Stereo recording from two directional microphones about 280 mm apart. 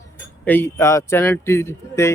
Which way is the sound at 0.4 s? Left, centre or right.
Centre.